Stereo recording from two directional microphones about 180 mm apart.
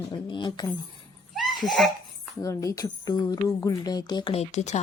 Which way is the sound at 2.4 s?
15° left (ahead or behind).